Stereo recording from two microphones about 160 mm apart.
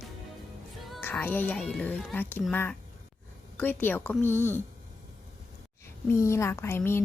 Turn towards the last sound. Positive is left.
turn(degrees=15)  # may be behind; listen again after turning